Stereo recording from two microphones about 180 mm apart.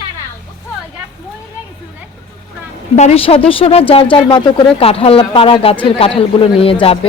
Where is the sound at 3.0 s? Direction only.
35° left (ahead or behind).